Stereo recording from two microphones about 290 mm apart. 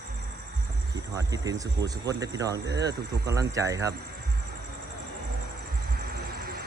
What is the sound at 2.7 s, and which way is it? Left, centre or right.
Speech, right.